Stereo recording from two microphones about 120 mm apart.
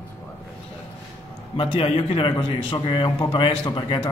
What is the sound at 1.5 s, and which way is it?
A man's voice, 50° left (ahead or behind).